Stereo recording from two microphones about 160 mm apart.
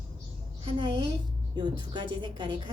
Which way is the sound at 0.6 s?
35° right (ahead or behind).